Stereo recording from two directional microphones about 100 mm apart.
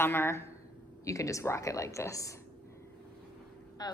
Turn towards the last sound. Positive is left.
turn(degrees=40)  # may be behind; listen again after turning